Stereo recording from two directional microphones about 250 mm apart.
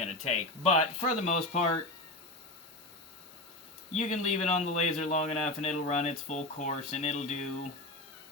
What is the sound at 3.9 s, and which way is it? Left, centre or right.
A man's voice, left.